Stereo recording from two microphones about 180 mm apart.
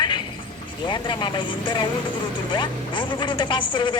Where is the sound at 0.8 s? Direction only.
25° left (ahead or behind).